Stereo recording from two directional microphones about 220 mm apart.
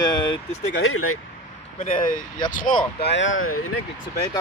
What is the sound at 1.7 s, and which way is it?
Speech, 30° left (ahead or behind).